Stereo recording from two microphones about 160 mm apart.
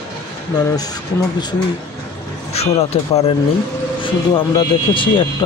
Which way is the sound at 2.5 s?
40° left (ahead or behind).